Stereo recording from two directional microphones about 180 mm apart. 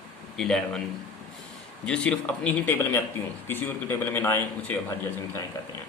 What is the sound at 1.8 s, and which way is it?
A man's voice, 5° left (ahead or behind).